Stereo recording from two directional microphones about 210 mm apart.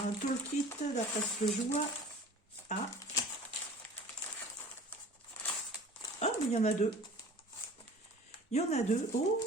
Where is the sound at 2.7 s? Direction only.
35° left (ahead or behind).